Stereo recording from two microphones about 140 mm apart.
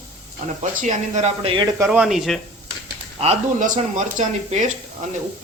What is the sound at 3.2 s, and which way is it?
Speech, 55° right (ahead or behind).